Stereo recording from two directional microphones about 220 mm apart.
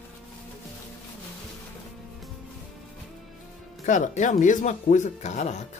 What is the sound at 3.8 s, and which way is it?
Speech, 35° left (ahead or behind).